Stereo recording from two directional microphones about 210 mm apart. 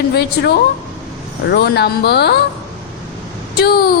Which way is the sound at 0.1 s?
50° left (ahead or behind).